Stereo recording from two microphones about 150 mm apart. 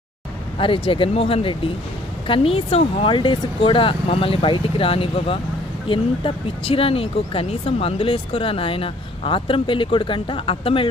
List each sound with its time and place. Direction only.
0.6 s speech: 35° left (ahead or behind)